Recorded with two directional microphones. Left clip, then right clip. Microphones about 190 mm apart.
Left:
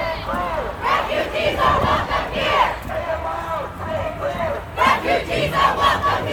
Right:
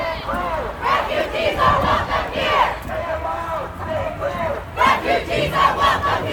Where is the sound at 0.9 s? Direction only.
55° right (ahead or behind).